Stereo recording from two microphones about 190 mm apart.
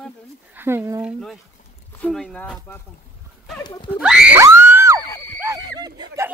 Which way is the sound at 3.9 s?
5° right (ahead or behind).